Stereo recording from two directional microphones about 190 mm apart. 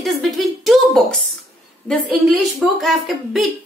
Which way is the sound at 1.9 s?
Centre (ahead or behind).